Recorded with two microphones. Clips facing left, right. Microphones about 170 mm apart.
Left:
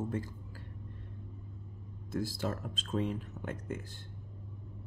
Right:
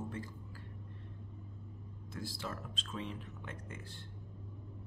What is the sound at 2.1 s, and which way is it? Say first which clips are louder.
Speech: left 8 dB; 45° left (ahead or behind).